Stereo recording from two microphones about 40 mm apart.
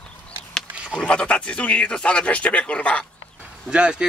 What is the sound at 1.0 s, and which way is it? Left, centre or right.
Speech, left.